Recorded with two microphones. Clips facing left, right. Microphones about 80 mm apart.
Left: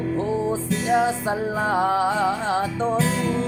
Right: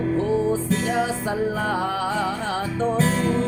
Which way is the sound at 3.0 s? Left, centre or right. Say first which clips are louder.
Right 2 dB; right.